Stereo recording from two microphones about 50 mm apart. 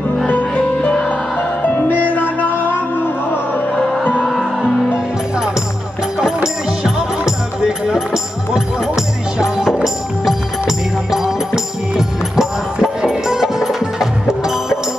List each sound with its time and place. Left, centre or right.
0.6 s music: centre
1.6 s music: left
6.1 s music: centre